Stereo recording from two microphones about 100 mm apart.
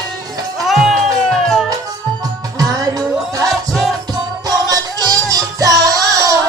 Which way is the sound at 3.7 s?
Centre (ahead or behind).